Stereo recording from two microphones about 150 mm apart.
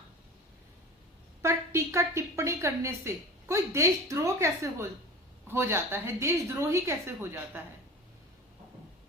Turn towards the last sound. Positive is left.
turn(degrees=-15)  # may be behind; listen again after turning